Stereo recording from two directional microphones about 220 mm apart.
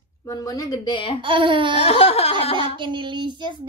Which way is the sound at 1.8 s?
25° left (ahead or behind).